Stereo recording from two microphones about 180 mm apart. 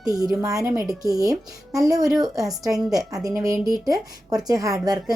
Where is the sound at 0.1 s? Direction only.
20° right (ahead or behind).